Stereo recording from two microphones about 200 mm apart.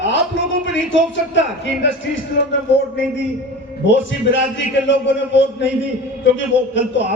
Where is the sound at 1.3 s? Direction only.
65° left (ahead or behind).